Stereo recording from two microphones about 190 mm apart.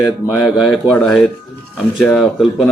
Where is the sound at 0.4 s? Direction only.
Centre (ahead or behind).